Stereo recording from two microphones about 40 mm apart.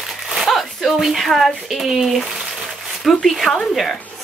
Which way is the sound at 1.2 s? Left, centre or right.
Centre.